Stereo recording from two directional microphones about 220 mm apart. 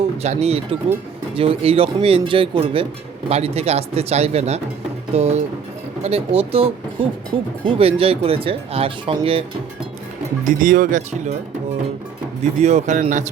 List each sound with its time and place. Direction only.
0.2 s speech: 30° right (ahead or behind)
10.4 s speech: 40° right (ahead or behind)
12.4 s speech: 30° right (ahead or behind)